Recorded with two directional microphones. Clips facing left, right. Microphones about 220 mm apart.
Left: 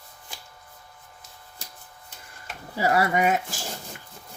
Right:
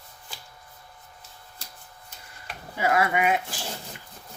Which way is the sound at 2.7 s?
35° left (ahead or behind).